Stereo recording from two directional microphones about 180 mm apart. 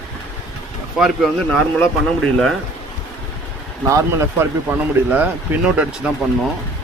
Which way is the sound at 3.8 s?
15° right (ahead or behind).